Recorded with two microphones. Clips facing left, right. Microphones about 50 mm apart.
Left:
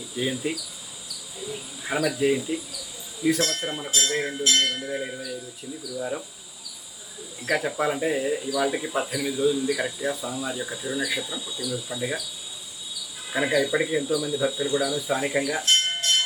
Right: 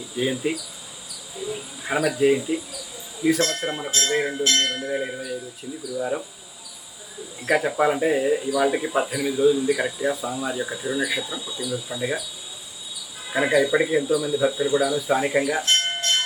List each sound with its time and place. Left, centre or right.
0.2 s speech: centre
7.5 s speech: centre
13.3 s speech: centre